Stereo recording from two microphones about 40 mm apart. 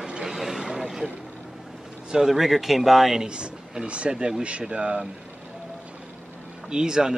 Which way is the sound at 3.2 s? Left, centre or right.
Right.